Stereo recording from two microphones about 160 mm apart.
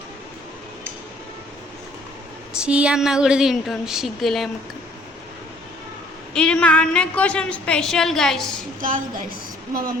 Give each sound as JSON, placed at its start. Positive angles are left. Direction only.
{"t": 2.6, "sound": "a woman's voice", "side_deg": -5}
{"t": 6.3, "sound": "a woman's voice", "side_deg": 5}
{"t": 8.8, "sound": "a woman's voice", "side_deg": -60}